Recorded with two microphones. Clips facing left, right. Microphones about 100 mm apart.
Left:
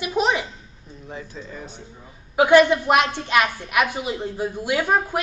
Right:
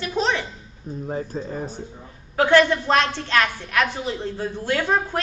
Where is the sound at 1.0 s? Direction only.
40° right (ahead or behind).